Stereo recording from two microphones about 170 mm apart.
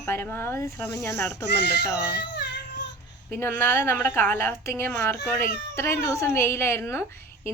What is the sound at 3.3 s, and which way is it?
A woman's voice, 15° left (ahead or behind).